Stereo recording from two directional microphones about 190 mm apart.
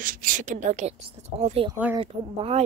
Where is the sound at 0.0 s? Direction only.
45° right (ahead or behind); by 2.6 s 30° right (ahead or behind).